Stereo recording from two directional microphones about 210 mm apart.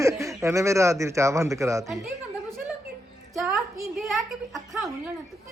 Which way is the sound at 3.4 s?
Centre (ahead or behind).